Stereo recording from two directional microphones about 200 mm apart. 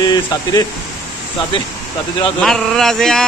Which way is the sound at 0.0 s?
20° left (ahead or behind).